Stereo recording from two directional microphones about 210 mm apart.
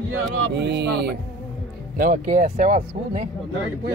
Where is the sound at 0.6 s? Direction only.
55° right (ahead or behind).